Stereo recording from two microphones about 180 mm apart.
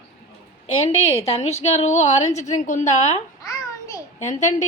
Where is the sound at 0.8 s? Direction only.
35° left (ahead or behind).